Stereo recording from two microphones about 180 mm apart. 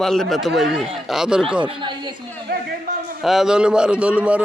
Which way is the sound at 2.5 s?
55° right (ahead or behind).